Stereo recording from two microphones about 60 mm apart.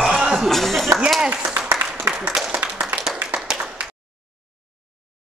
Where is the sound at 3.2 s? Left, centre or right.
Right.